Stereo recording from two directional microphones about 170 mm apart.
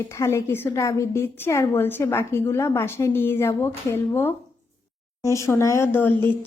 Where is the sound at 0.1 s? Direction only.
15° left (ahead or behind).